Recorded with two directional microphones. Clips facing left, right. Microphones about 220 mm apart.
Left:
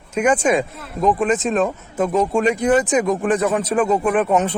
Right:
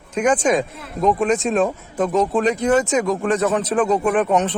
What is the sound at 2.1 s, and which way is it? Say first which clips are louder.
A man's voice: left 1 dB; 10° left (ahead or behind).